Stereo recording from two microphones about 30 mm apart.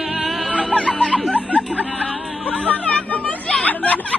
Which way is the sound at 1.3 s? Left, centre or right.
Left.